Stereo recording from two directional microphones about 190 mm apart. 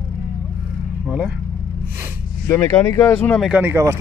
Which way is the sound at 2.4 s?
10° left (ahead or behind).